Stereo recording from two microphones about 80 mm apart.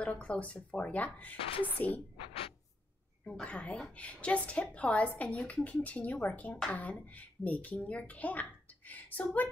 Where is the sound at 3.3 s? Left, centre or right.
Centre.